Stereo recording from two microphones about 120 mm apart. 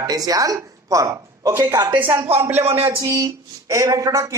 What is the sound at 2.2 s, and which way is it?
Speech, 20° right (ahead or behind).